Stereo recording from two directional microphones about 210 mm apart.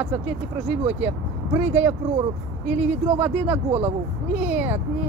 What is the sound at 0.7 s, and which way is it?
Speech, 10° right (ahead or behind).